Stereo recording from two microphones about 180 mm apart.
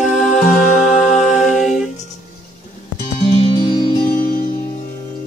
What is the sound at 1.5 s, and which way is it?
Music, centre (ahead or behind).